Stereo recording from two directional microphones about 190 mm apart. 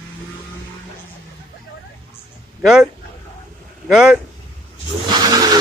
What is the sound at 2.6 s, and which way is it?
A man's voice, 5° right (ahead or behind).